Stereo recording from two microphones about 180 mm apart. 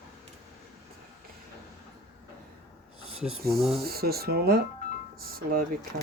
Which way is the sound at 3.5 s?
Centre (ahead or behind).